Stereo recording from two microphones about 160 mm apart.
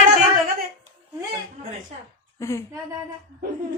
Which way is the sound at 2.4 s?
20° left (ahead or behind).